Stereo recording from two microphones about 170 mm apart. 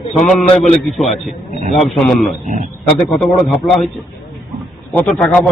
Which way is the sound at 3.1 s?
Centre (ahead or behind).